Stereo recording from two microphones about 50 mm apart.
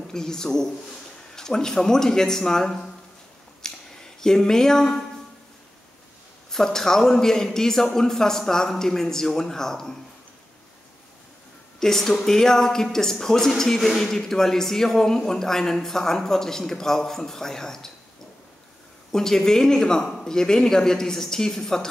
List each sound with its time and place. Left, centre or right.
0.1 s a man's voice: centre
3.6 s a sound: centre
6.5 s a man's voice: centre
11.8 s a man's voice: centre
19.1 s a man's voice: centre